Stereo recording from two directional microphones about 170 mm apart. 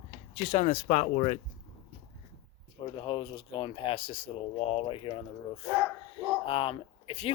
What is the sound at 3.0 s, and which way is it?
Speech, 30° left (ahead or behind).